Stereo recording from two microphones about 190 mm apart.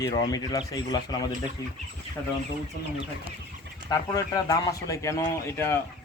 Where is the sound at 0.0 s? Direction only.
20° left (ahead or behind).